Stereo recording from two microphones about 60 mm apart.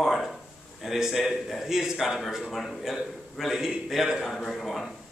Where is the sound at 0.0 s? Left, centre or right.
Centre.